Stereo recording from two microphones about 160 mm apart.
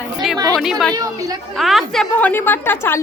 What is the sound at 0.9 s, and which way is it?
Speech, 20° right (ahead or behind).